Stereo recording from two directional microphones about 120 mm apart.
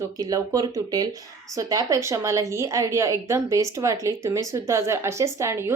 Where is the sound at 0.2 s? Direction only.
30° right (ahead or behind).